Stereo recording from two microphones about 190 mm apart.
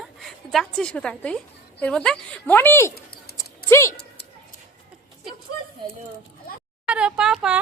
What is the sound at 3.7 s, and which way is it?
Speech, 15° left (ahead or behind).